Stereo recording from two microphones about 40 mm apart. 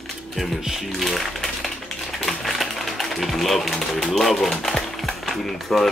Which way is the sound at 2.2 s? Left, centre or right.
Centre.